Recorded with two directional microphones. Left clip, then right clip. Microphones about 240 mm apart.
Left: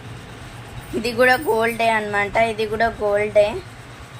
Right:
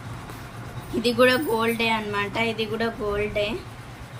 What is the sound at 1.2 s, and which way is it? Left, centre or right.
A woman's voice, centre.